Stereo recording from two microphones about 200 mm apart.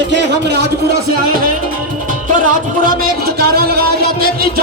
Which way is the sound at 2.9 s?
50° right (ahead or behind).